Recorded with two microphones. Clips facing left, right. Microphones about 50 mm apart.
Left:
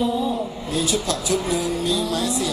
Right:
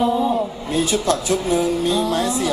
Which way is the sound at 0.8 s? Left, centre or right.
Right.